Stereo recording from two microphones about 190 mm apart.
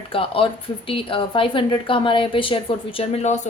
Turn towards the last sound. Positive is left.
turn(degrees=35)  # may be behind; listen again after turning